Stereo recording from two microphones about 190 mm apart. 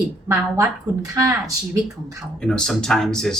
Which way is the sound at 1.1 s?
15° right (ahead or behind).